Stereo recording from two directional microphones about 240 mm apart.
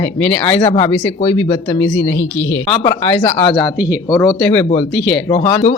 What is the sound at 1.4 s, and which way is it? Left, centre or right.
Speech, left.